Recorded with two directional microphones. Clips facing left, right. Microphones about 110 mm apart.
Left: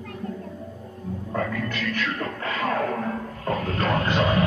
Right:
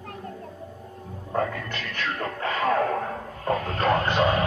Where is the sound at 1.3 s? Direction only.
30° right (ahead or behind).